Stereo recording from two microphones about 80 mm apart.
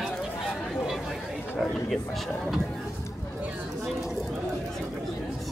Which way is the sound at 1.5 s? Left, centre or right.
Centre.